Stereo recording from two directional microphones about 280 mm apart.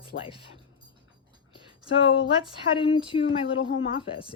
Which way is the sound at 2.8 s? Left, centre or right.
Centre.